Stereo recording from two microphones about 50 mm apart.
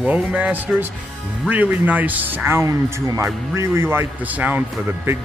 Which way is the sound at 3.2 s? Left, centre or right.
Right.